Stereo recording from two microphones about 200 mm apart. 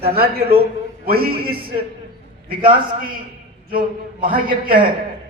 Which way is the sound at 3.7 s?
45° right (ahead or behind).